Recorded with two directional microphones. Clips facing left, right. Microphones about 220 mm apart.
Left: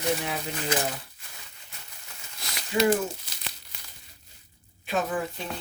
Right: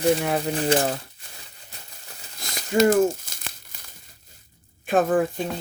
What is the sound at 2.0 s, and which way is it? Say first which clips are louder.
Crumpling: right 3 dB; 45° right (ahead or behind).